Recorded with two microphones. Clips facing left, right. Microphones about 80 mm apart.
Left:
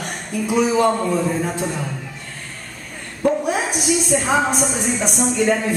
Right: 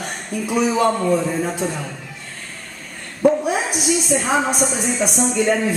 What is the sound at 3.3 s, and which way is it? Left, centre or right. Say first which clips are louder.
A woman's voice: right 2 dB; centre.